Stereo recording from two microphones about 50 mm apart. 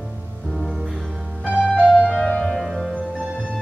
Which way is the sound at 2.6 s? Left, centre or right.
Centre.